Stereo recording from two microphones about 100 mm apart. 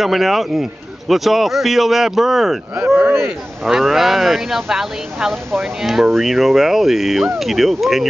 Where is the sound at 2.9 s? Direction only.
20° right (ahead or behind).